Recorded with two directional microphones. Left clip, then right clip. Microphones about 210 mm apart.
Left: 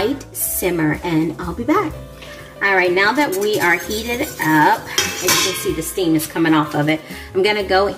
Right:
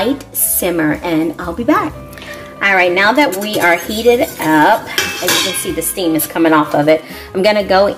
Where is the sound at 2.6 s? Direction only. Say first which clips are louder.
Right 4 dB; 35° right (ahead or behind).